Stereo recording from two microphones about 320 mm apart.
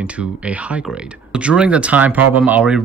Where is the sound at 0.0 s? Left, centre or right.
Centre.